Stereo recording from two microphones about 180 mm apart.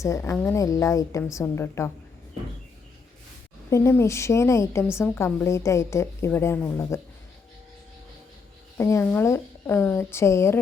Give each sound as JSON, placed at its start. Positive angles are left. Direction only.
{"t": 0.0, "sound": "a woman's voice", "side_deg": 15}
{"t": 3.7, "sound": "a woman's voice", "side_deg": 15}
{"t": 8.8, "sound": "a woman's voice", "side_deg": 15}